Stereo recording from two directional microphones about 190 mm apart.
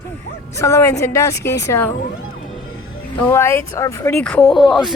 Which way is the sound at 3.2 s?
15° left (ahead or behind).